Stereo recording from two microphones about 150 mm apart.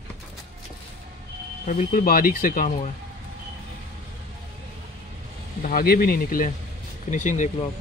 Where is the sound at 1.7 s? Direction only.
60° left (ahead or behind).